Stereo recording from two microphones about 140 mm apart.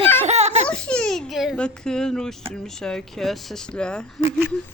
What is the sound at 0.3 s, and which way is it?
Baby laughter, 50° right (ahead or behind).